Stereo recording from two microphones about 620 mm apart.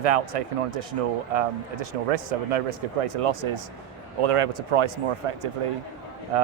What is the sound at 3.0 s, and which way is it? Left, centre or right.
Speech, right.